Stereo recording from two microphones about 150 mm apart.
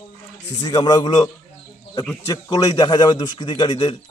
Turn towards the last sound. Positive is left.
turn(degrees=30)  # may be behind; listen again after turning